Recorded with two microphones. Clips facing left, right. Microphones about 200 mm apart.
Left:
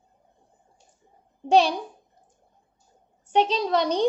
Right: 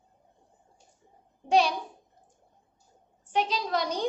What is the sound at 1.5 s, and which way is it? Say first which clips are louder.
Speech: left 4 dB; 30° left (ahead or behind).